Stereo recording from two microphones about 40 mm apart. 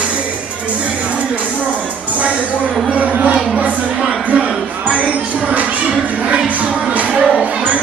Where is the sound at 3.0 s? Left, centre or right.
Right.